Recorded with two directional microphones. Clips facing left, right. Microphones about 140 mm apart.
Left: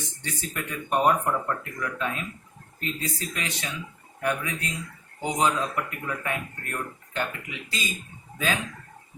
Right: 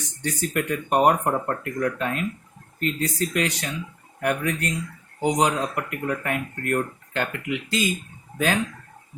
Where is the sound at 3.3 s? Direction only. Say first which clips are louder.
Right 8 dB; 70° right (ahead or behind).